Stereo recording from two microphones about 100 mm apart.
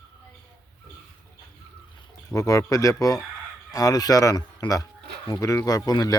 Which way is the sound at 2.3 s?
35° left (ahead or behind).